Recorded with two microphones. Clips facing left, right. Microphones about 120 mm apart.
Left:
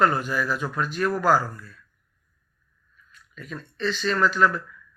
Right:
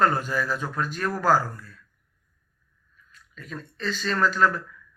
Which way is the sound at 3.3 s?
40° right (ahead or behind).